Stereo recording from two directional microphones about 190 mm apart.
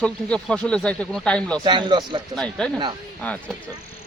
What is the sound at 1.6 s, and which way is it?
Speech, 25° right (ahead or behind).